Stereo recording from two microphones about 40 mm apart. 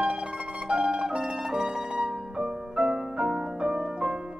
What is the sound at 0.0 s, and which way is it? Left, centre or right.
Music, right.